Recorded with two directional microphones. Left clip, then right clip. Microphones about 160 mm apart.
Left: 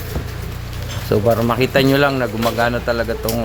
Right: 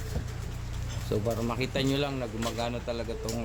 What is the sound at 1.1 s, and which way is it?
Speech, 30° left (ahead or behind).